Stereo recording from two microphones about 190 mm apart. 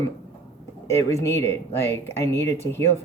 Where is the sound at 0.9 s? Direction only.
15° left (ahead or behind).